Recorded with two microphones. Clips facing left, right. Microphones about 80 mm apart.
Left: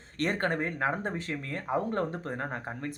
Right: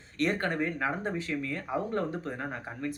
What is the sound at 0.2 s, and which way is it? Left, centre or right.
Speech, left.